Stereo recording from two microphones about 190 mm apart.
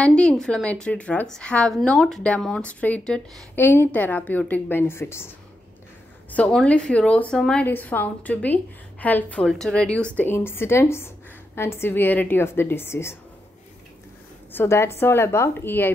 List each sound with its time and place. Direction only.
0.0 s a woman's voice: 5° left (ahead or behind)
6.3 s a woman's voice: 5° left (ahead or behind)
14.5 s a woman's voice: 15° left (ahead or behind)